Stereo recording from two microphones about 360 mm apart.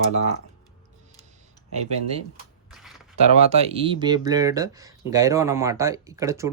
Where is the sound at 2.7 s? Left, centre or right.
Centre.